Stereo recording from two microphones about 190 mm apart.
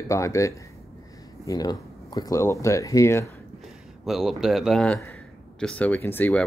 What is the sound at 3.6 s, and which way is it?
Speech, centre (ahead or behind).